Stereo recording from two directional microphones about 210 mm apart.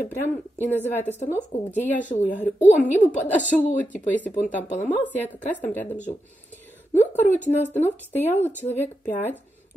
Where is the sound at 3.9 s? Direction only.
10° left (ahead or behind).